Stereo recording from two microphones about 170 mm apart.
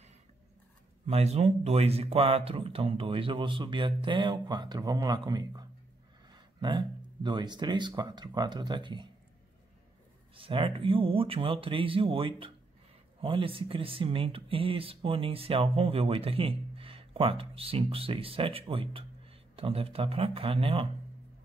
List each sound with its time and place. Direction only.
1.0 s speech: 40° right (ahead or behind)
10.3 s speech: 30° right (ahead or behind)